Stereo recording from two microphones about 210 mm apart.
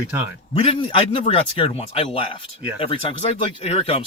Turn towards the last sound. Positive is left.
turn(degrees=30)  # may be behind; listen again after turning